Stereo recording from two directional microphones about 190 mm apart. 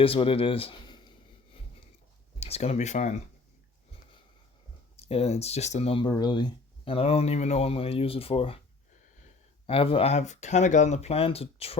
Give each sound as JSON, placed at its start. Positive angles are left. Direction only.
{"t": 0.0, "sound": "speech", "side_deg": 30}
{"t": 2.4, "sound": "speech", "side_deg": 35}
{"t": 4.9, "sound": "speech", "side_deg": 30}
{"t": 9.6, "sound": "speech", "side_deg": 30}